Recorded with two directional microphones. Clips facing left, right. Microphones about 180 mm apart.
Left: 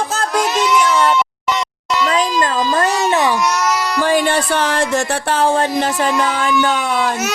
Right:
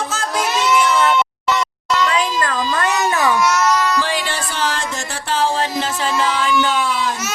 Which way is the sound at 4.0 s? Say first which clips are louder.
Left 7 dB; 50° left (ahead or behind).